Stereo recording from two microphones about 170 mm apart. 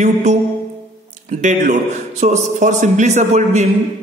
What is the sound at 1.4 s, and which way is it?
A man's voice, 45° right (ahead or behind).